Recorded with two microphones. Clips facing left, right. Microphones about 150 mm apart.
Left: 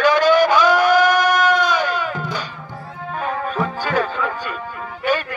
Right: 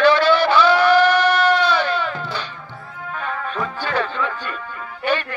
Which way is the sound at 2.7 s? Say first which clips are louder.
Left 3 dB; 40° left (ahead or behind).